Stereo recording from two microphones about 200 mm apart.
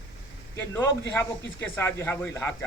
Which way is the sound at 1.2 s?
10° left (ahead or behind).